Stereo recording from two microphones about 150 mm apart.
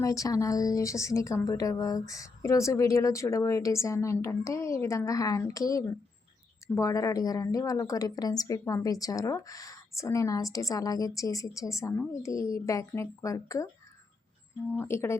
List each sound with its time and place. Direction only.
0.0 s speech: 20° left (ahead or behind)
14.8 s speech: 15° left (ahead or behind)